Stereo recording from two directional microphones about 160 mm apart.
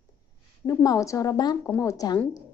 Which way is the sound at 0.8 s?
20° left (ahead or behind).